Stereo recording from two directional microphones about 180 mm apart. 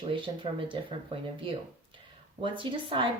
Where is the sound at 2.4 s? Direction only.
30° right (ahead or behind).